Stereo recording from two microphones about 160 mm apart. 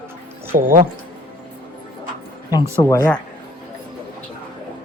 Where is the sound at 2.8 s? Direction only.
20° left (ahead or behind).